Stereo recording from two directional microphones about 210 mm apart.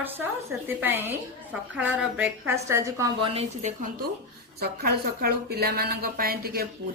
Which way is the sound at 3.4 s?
35° right (ahead or behind).